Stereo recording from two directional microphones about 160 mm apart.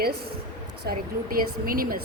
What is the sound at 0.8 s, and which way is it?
A woman's voice, 65° right (ahead or behind).